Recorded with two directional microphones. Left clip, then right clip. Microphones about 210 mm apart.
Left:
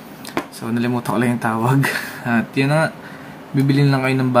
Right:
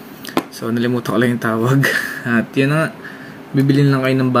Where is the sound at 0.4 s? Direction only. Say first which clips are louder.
Right 4 dB; 35° right (ahead or behind).